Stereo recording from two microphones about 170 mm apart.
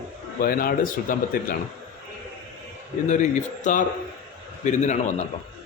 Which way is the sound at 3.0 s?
45° left (ahead or behind).